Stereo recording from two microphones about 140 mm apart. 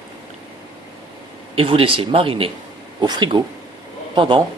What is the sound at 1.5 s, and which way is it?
Speech, 40° right (ahead or behind).